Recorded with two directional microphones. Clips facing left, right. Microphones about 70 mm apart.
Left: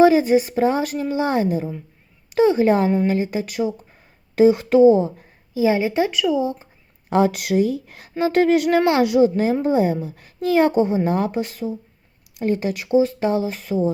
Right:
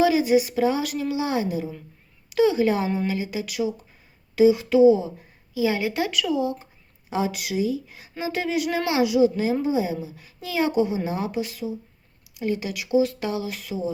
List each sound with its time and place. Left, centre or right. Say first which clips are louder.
0.0 s a woman's voice: left 5 dB; left
5.6 s speech: left 6 dB; left
7.1 s a woman's voice: left 8 dB; left